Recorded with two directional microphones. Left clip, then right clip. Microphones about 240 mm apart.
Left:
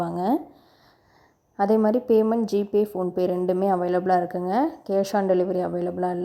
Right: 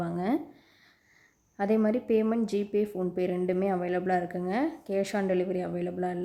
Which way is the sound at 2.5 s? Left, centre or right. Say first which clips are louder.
Left 6 dB; centre.